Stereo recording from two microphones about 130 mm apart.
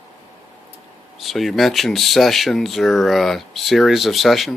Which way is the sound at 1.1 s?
Centre (ahead or behind).